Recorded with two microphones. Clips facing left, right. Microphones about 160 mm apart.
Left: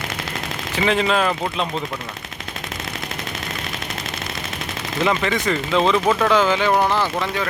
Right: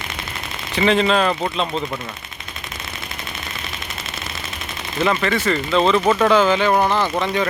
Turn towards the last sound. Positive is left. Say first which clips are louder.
# right 2 dB
turn(degrees=-15)  # may be behind; listen again after turning